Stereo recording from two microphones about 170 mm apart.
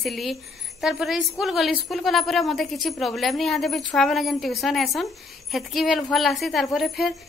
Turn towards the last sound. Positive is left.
turn(degrees=0)  # may be behind; listen again after turning